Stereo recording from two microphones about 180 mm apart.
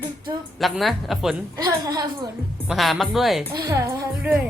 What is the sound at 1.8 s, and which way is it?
Speech, 20° right (ahead or behind).